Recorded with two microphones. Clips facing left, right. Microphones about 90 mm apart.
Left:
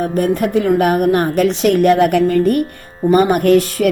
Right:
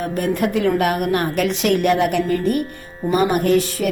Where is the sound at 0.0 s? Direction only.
35° left (ahead or behind).